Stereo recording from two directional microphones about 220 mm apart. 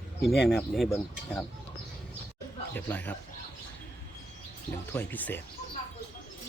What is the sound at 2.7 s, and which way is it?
Speech, 10° left (ahead or behind).